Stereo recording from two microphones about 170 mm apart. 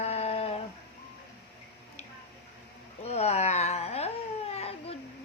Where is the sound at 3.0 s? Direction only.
40° left (ahead or behind).